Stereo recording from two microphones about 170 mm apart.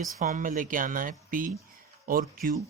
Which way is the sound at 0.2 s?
50° right (ahead or behind).